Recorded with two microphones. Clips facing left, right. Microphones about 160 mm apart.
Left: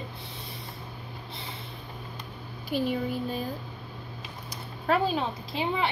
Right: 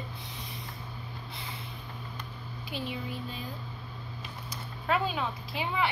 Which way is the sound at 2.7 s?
45° left (ahead or behind).